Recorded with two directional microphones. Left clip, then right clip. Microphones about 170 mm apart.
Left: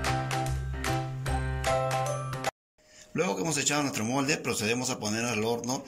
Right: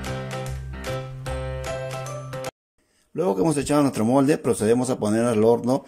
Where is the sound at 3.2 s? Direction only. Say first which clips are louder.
Right 7 dB; 50° right (ahead or behind).